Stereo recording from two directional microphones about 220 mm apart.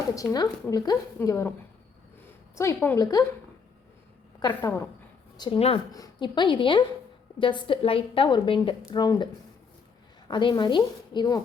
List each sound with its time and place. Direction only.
0.2 s speech: 15° left (ahead or behind)
2.6 s speech: 10° left (ahead or behind)
4.4 s a woman's voice: 20° left (ahead or behind)